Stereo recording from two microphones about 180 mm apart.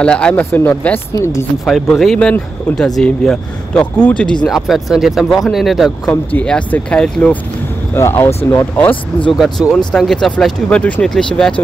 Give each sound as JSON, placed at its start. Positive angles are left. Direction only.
{"t": 0.0, "sound": "speech", "side_deg": 5}
{"t": 1.7, "sound": "speech", "side_deg": 0}
{"t": 9.4, "sound": "speech", "side_deg": 0}